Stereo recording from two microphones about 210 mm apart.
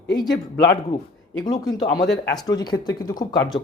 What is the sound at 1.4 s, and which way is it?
Speech, 20° left (ahead or behind).